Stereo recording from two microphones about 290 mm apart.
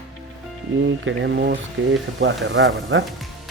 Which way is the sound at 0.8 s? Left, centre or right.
Right.